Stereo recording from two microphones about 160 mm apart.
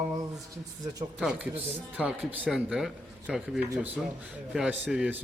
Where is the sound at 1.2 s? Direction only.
10° right (ahead or behind).